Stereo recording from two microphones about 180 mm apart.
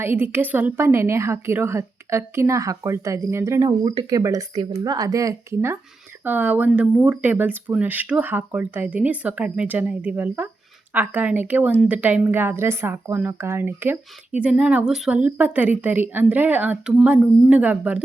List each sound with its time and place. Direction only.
0.0 s a woman's voice: 10° right (ahead or behind)